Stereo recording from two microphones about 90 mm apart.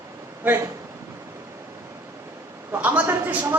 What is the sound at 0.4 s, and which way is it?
Speech, 25° right (ahead or behind).